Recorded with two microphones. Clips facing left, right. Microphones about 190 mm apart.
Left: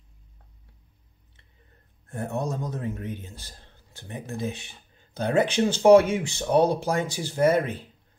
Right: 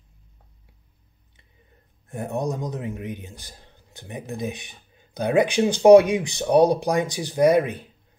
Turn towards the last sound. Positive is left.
turn(degrees=-15)  # may be behind; listen again after turning